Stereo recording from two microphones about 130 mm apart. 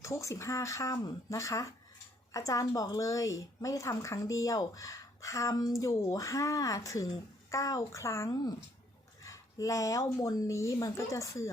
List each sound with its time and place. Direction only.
0.0 s a woman's voice: 25° left (ahead or behind)